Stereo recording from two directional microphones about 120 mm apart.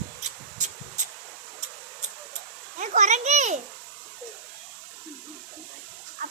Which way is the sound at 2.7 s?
90° right.